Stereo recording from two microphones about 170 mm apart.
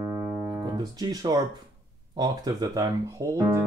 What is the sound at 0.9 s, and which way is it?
Speech, 20° right (ahead or behind).